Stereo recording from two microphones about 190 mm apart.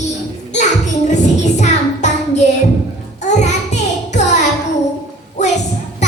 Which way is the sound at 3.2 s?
40° left (ahead or behind).